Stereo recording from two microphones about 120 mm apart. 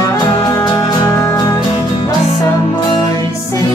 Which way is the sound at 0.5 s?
30° left (ahead or behind).